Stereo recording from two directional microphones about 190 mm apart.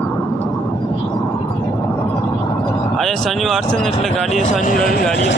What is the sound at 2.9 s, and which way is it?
Speech, centre (ahead or behind).